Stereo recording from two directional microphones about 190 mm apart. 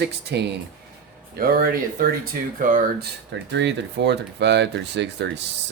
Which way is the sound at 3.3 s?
65° right (ahead or behind).